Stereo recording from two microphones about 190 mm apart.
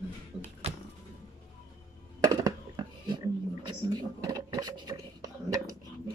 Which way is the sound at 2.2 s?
20° right (ahead or behind).